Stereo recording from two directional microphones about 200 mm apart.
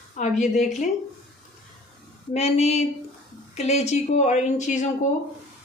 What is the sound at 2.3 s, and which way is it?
A woman's voice, 30° left (ahead or behind).